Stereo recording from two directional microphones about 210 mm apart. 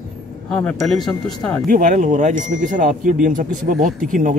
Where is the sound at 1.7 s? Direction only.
40° right (ahead or behind).